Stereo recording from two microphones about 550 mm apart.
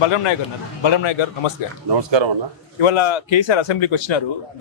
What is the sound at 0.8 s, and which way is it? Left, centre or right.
Speech, left.